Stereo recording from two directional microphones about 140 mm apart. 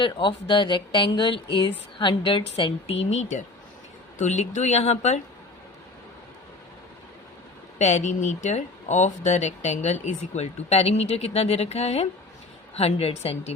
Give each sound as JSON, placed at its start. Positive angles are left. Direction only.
{"t": 0.0, "sound": "speech", "side_deg": 35}
{"t": 7.8, "sound": "speech", "side_deg": 55}